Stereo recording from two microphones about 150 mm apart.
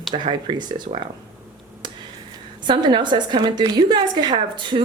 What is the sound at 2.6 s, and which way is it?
A woman's voice, 30° right (ahead or behind).